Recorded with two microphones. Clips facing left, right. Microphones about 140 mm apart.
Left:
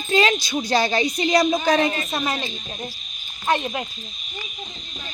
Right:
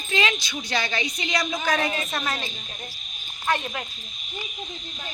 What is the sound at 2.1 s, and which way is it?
Speech, 15° left (ahead or behind).